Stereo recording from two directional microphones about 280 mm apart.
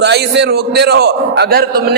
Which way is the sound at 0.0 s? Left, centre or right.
Right.